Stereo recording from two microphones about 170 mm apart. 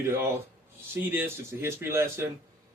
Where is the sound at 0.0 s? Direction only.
15° right (ahead or behind).